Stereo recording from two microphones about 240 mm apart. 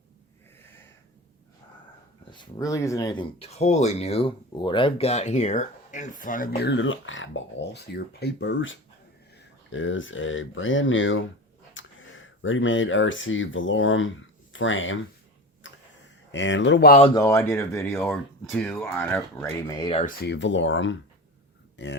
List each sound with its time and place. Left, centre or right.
2.3 s speech: centre; by 14.9 s left
15.6 s tick-tock: left
16.3 s speech: left
17.2 s speech: centre
20.2 s speech: left